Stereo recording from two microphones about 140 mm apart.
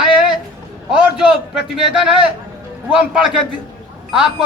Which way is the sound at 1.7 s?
5° right (ahead or behind).